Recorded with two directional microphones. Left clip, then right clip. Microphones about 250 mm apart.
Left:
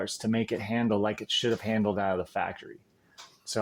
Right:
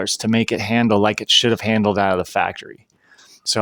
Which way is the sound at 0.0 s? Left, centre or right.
Right.